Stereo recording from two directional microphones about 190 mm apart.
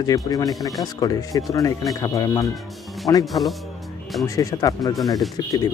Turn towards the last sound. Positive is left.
turn(degrees=20)  # may be behind; listen again after turning